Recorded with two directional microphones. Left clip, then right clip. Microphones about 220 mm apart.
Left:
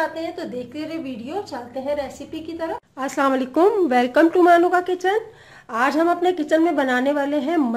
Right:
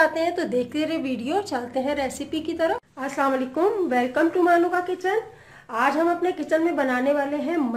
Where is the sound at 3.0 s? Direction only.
50° left (ahead or behind).